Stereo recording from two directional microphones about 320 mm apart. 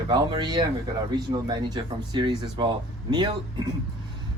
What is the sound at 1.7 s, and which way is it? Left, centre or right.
Speech, centre.